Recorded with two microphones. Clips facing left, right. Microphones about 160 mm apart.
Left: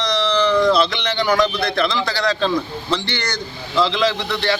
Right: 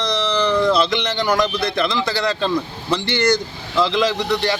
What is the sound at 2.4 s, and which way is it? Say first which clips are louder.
Speech: left 1 dB; 10° right (ahead or behind).